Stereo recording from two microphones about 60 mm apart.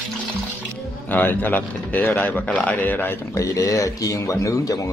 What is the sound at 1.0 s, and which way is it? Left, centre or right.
Speech, left.